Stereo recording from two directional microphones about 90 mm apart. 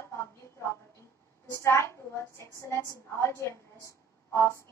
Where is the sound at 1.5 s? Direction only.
30° left (ahead or behind).